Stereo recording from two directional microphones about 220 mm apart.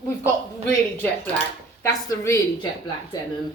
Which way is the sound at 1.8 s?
15° left (ahead or behind).